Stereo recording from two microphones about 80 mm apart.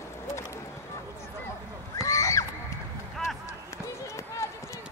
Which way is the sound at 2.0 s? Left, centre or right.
Left.